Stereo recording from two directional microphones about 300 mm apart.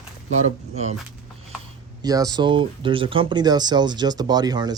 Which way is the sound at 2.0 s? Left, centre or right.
Centre.